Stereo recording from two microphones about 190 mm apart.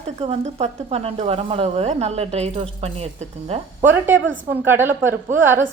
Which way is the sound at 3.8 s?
10° right (ahead or behind).